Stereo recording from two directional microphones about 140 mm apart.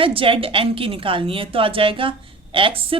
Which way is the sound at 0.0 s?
40° right (ahead or behind).